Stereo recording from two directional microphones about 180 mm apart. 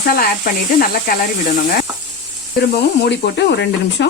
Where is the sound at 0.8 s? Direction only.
55° left (ahead or behind).